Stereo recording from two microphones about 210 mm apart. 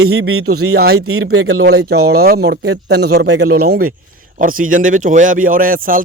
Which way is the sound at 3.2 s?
90° right.